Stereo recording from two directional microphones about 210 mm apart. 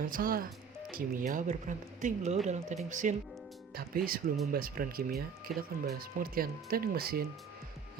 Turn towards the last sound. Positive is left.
turn(degrees=-45)  # may be behind; listen again after turning